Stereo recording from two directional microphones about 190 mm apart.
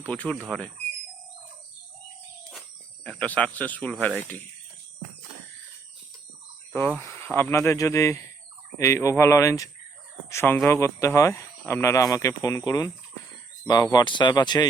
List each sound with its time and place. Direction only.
0.0 s speech: 5° left (ahead or behind)
2.5 s a sound: centre (ahead or behind)
4.0 s speech: 10° left (ahead or behind)
7.0 s speech: 15° left (ahead or behind)